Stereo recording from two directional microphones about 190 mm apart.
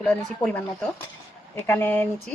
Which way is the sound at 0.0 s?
5° left (ahead or behind).